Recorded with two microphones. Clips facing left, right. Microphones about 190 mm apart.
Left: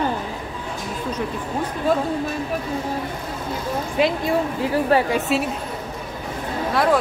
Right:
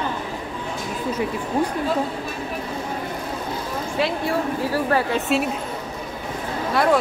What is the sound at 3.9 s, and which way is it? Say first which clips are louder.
A woman's voice: left 3 dB; 20° left (ahead or behind).